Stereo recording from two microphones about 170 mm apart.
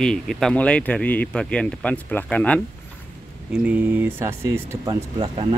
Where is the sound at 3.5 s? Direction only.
10° right (ahead or behind).